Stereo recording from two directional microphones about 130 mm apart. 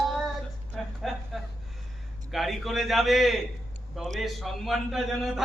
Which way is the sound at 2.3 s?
Centre (ahead or behind).